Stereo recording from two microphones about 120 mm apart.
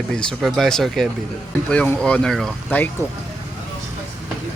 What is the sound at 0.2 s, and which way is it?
Speech, centre (ahead or behind).